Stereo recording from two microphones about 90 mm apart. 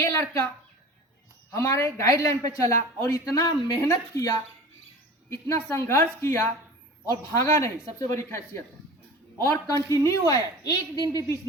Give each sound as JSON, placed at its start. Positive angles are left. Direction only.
{"t": 0.0, "sound": "a woman's voice", "side_deg": 35}
{"t": 1.5, "sound": "a man's voice", "side_deg": 30}
{"t": 5.3, "sound": "a woman's voice", "side_deg": 30}